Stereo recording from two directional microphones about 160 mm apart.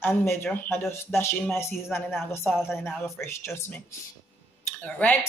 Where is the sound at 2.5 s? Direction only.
Centre (ahead or behind).